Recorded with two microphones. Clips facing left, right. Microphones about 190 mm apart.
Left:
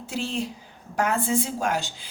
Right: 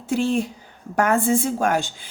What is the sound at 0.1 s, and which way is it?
A woman's voice, 55° right (ahead or behind).